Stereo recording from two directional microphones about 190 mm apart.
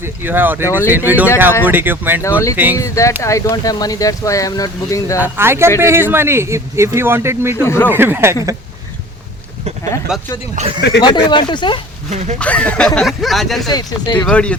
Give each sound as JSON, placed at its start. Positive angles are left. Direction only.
{"t": 0.0, "sound": "speech", "side_deg": -10}
{"t": 2.7, "sound": "speech", "side_deg": 15}
{"t": 5.2, "sound": "speech", "side_deg": -10}
{"t": 7.6, "sound": "speech", "side_deg": 15}
{"t": 7.9, "sound": "speech", "side_deg": -10}
{"t": 10.1, "sound": "speech", "side_deg": -5}
{"t": 10.8, "sound": "speech", "side_deg": 60}
{"t": 11.0, "sound": "speech", "side_deg": 25}
{"t": 12.1, "sound": "speech", "side_deg": -35}
{"t": 12.4, "sound": "speech", "side_deg": 5}
{"t": 13.7, "sound": "speech", "side_deg": 20}
{"t": 14.3, "sound": "speech", "side_deg": 5}